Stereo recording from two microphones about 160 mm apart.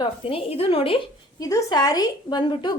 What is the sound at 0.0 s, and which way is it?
Speech, 35° left (ahead or behind).